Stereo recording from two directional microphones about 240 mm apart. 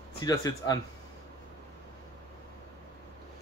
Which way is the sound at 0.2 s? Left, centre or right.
Centre.